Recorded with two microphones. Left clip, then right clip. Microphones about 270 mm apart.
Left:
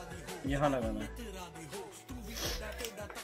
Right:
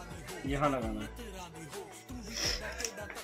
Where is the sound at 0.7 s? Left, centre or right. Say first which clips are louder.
Even; centre.